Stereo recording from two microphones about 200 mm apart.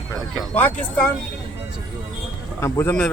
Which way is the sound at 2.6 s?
10° left (ahead or behind).